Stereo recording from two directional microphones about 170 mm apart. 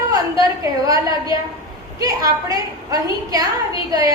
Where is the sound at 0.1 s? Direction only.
20° right (ahead or behind).